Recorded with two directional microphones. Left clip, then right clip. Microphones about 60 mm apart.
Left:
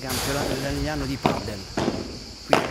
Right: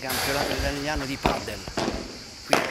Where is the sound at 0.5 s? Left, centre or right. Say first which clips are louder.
Even; centre.